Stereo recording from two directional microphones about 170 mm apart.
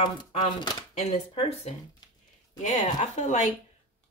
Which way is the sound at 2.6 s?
45° left (ahead or behind).